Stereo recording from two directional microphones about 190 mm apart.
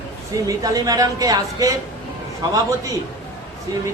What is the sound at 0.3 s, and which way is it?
A woman's voice, 20° right (ahead or behind).